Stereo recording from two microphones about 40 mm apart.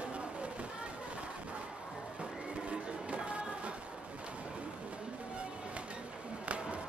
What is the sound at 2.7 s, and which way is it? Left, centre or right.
Music, right.